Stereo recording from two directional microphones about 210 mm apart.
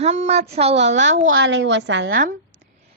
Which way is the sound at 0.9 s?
60° right (ahead or behind).